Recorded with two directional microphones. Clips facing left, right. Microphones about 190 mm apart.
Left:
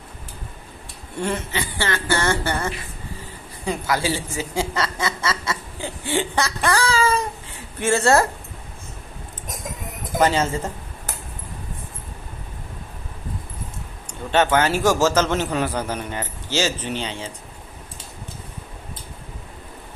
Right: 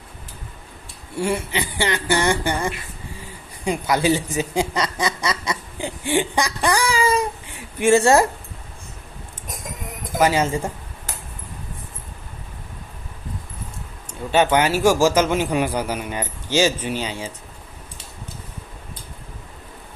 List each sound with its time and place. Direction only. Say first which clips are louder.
1.1 s a man's voice: right 2 dB; 10° right (ahead or behind)
10.0 s speech: right 1 dB; 10° right (ahead or behind)
14.1 s a man's voice: right 1 dB; 10° right (ahead or behind)